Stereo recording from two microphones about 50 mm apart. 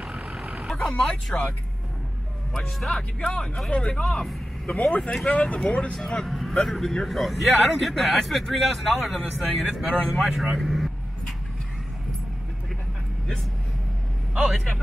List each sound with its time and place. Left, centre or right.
0.0 s vehicle: centre
0.7 s speech: centre
2.5 s speech: centre
4.2 s vehicle: centre
4.8 s speech: left
5.9 s speech: centre
6.2 s a man's voice: centre
10.1 s vehicle: centre
14.3 s a man's voice: centre